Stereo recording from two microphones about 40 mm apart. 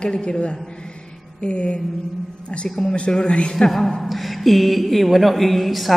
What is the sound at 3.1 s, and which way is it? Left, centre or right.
Speech, left.